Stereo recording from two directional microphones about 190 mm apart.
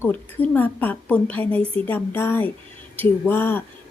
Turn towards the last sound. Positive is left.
turn(degrees=10)  # may be behind; listen again after turning